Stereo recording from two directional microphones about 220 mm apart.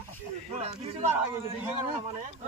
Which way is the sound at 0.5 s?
30° right (ahead or behind).